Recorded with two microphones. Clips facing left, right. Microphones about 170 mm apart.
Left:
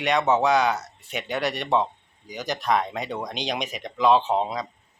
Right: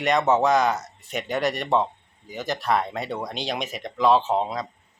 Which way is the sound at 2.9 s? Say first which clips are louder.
Right 1 dB; 15° left (ahead or behind).